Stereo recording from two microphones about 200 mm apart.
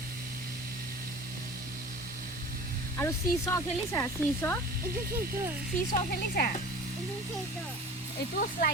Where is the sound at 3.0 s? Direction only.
15° left (ahead or behind).